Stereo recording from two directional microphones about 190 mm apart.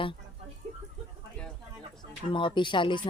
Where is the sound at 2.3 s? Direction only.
25° left (ahead or behind).